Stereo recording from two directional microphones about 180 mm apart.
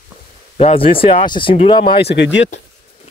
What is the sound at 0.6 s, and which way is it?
Speech, 30° left (ahead or behind).